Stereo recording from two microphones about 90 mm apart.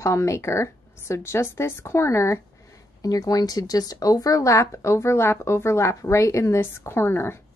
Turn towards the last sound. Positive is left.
turn(degrees=25)  # may be behind; listen again after turning